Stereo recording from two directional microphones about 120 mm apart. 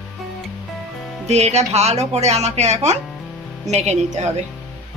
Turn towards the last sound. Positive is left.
turn(degrees=-70)  # may be behind; listen again after turning